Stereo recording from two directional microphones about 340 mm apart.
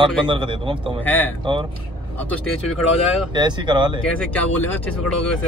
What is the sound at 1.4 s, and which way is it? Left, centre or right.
Speech, centre.